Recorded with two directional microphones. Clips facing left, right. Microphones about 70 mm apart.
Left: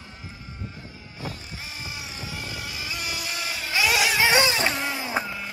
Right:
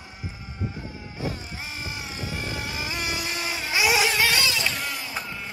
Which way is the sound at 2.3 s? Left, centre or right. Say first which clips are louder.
Right 4 dB; right.